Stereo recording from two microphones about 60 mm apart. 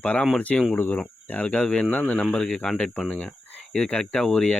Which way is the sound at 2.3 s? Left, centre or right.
Centre.